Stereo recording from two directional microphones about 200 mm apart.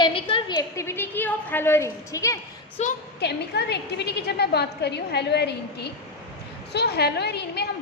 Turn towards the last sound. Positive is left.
turn(degrees=55)  # may be behind; listen again after turning